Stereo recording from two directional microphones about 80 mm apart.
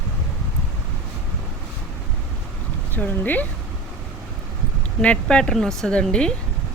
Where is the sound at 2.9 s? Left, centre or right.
Left.